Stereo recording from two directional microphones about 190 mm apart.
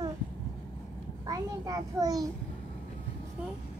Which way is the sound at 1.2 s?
20° right (ahead or behind).